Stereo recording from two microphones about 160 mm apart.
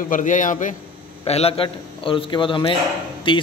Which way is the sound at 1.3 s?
40° left (ahead or behind).